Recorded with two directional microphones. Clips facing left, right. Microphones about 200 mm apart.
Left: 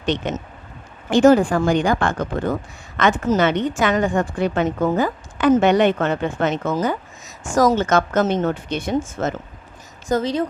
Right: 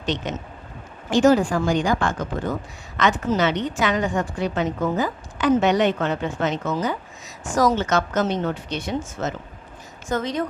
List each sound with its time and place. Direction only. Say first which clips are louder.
0.0 s a woman's voice: left 4 dB; 60° left (ahead or behind)
10.1 s speech: left 4 dB; 30° left (ahead or behind)